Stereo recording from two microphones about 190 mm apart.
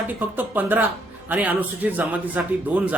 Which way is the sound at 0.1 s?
10° right (ahead or behind).